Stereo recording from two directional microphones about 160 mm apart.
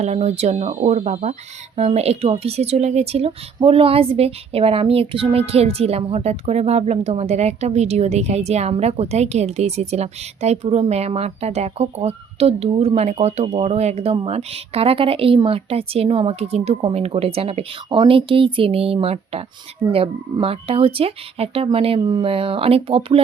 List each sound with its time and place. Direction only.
0.0 s speech: 45° right (ahead or behind)